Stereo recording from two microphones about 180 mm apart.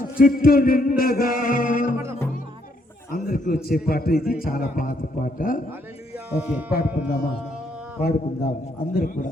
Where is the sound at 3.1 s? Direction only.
50° left (ahead or behind).